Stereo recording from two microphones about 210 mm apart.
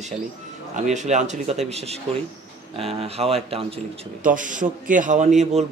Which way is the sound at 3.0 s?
30° right (ahead or behind).